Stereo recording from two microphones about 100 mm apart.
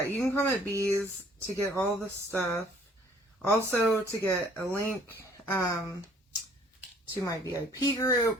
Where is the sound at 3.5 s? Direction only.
25° left (ahead or behind).